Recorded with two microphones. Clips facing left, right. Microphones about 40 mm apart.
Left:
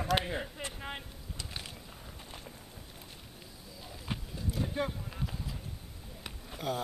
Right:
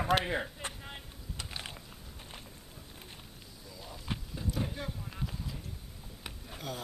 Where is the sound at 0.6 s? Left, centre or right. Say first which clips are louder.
Even; left.